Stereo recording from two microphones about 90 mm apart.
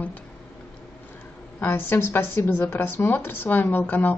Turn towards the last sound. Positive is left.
turn(degrees=20)  # may be behind; listen again after turning